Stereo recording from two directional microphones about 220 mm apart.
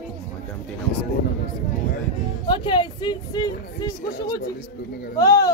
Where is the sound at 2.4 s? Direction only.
20° left (ahead or behind).